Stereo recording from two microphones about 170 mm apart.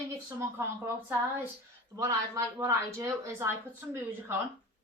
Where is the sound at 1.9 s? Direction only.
20° right (ahead or behind).